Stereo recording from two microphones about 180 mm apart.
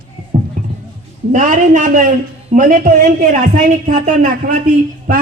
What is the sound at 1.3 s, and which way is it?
A woman's voice, 45° right (ahead or behind).